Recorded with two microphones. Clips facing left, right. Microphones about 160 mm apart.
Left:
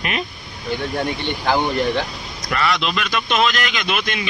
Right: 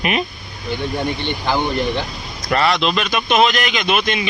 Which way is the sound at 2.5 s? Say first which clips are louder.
Right 4 dB; 30° right (ahead or behind).